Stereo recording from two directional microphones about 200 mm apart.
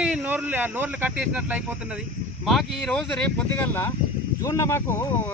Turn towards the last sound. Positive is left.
turn(degrees=10)  # may be behind; listen again after turning